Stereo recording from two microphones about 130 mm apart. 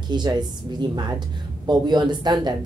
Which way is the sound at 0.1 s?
35° right (ahead or behind).